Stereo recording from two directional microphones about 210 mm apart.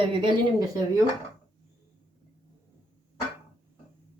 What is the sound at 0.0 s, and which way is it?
Speech, 25° right (ahead or behind).